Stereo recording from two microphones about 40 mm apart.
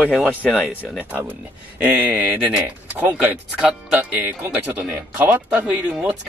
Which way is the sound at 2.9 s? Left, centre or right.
Right.